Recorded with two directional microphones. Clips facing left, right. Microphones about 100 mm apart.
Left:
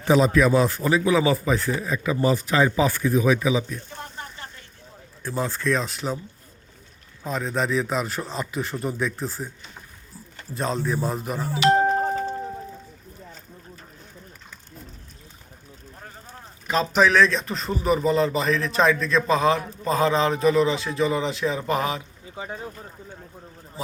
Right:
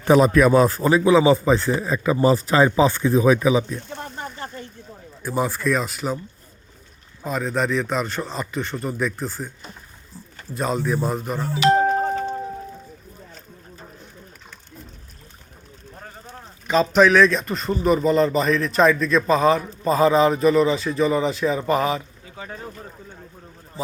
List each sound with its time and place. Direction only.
0.0 s speech: 55° right (ahead or behind)
0.8 s a man's voice: 35° right (ahead or behind)
5.2 s speech: 10° right (ahead or behind)
7.3 s a man's voice: centre (ahead or behind)
10.5 s a man's voice: 5° right (ahead or behind)
16.6 s a man's voice: centre (ahead or behind)
22.4 s speech: 15° left (ahead or behind)